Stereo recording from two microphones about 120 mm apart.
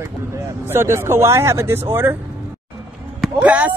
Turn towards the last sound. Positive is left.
turn(degrees=-10)  # may be behind; listen again after turning